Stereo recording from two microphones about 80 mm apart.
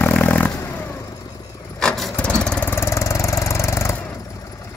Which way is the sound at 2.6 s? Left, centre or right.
Left.